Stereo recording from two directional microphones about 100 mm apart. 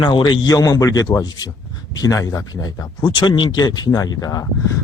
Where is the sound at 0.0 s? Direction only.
50° left (ahead or behind).